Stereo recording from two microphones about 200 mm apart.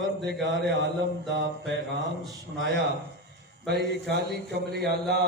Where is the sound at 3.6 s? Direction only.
55° right (ahead or behind).